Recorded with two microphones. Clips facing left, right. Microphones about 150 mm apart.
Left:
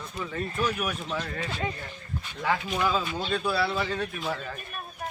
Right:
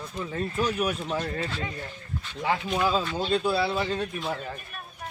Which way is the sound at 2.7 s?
30° right (ahead or behind).